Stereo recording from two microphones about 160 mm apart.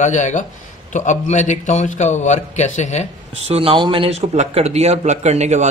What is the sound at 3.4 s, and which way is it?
A man's voice, 35° right (ahead or behind).